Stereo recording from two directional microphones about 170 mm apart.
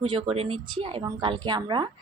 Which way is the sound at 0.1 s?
35° right (ahead or behind).